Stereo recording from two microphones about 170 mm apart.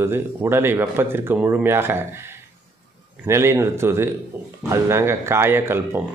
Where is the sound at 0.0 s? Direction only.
15° right (ahead or behind).